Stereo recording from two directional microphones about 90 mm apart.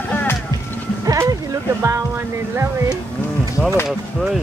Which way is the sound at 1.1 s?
40° right (ahead or behind).